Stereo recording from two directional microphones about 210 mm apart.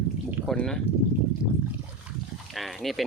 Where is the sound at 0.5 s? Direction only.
5° left (ahead or behind).